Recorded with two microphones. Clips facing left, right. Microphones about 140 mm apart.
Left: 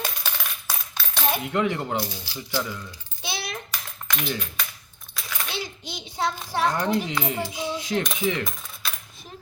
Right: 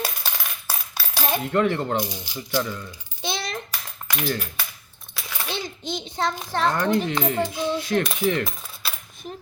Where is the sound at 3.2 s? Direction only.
10° left (ahead or behind).